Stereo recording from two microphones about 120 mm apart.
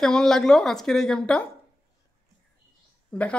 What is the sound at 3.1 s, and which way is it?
Speech, 10° left (ahead or behind).